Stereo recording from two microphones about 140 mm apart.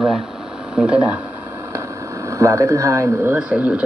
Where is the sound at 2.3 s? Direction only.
20° right (ahead or behind).